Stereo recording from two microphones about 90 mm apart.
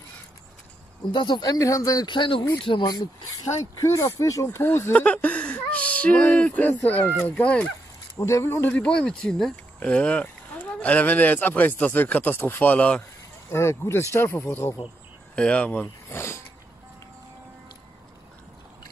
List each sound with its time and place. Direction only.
1.1 s speech: 60° left (ahead or behind); by 2.0 s 40° left (ahead or behind)
2.0 s speech: 65° left (ahead or behind)
2.8 s speech: 45° left (ahead or behind); by 4.9 s 25° left (ahead or behind)
4.9 s speech: 15° left (ahead or behind)
8.2 s speech: 35° left (ahead or behind)
8.6 s speech: 15° left (ahead or behind)
13.5 s speech: 30° left (ahead or behind)
15.3 s speech: 15° left (ahead or behind); by 16.4 s 30° left (ahead or behind)